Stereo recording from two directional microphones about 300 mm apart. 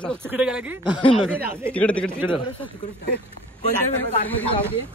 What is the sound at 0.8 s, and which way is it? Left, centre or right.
Speech, centre.